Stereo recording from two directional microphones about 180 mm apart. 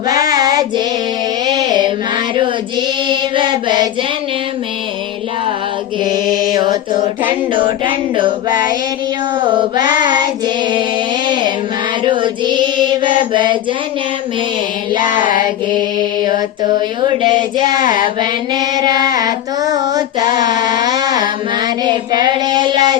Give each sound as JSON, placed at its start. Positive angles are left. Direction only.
{"t": 0.1, "sound": "child singing", "side_deg": -20}
{"t": 1.5, "sound": "music", "side_deg": -25}
{"t": 3.1, "sound": "mantra", "side_deg": -25}
{"t": 6.5, "sound": "child singing", "side_deg": -20}
{"t": 9.5, "sound": "child singing", "side_deg": -25}
{"t": 12.0, "sound": "child singing", "side_deg": -25}
{"t": 15.2, "sound": "mantra", "side_deg": 50}
{"t": 17.2, "sound": "child singing", "side_deg": -25}